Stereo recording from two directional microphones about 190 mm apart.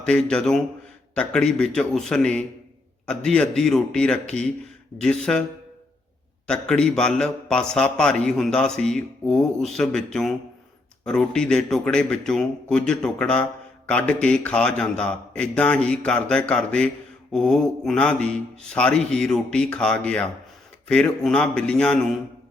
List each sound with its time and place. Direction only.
0.0 s a man's voice: 5° left (ahead or behind)
6.5 s a man's voice: 5° left (ahead or behind)